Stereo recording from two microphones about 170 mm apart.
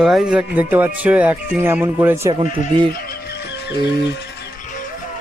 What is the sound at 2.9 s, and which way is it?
Music, 65° left (ahead or behind).